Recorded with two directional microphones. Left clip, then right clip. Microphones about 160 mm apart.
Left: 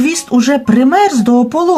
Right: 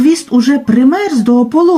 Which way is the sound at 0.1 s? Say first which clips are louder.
Right 1 dB; 30° left (ahead or behind).